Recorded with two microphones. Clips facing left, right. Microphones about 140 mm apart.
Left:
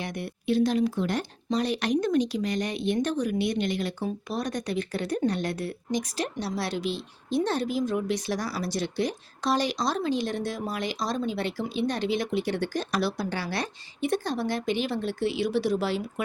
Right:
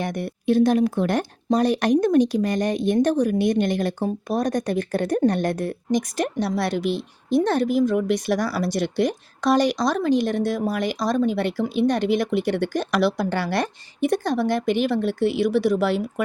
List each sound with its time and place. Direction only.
0.0 s speech: 50° right (ahead or behind)
1.2 s speech: 45° right (ahead or behind)